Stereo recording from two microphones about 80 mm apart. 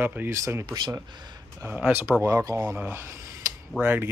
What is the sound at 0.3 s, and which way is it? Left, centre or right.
Speech, right.